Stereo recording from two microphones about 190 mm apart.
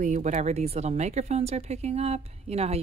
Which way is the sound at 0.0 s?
40° right (ahead or behind).